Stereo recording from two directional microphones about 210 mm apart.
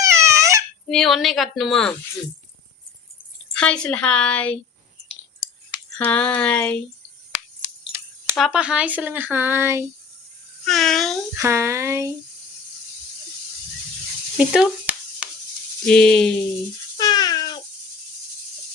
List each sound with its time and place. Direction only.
0.0 s baby cry: 15° right (ahead or behind)
0.9 s a woman's voice: centre (ahead or behind)
3.5 s a woman's voice: 5° left (ahead or behind)
6.0 s a woman's voice: 5° left (ahead or behind)
8.4 s speech: 5° right (ahead or behind)
10.7 s a woman's voice: centre (ahead or behind)
11.3 s speech: 15° right (ahead or behind)
14.3 s sizzle: 5° right (ahead or behind)
15.9 s a woman's voice: 5° left (ahead or behind)
17.0 s a sound: 20° left (ahead or behind)